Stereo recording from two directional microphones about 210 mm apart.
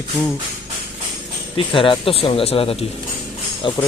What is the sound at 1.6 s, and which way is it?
Speech, 25° left (ahead or behind).